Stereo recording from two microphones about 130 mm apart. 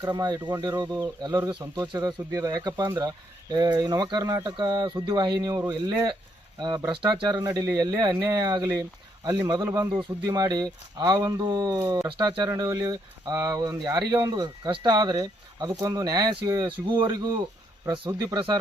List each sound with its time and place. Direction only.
0.0 s speech: 30° right (ahead or behind)
12.0 s speech: 40° right (ahead or behind)
17.8 s speech: 40° right (ahead or behind)